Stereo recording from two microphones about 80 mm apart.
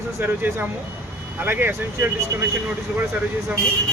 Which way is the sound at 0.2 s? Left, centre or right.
Right.